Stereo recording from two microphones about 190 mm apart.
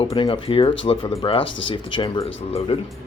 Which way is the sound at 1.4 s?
75° left (ahead or behind).